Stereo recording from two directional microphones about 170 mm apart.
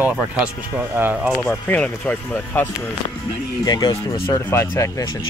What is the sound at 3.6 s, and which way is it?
Speech, 25° left (ahead or behind).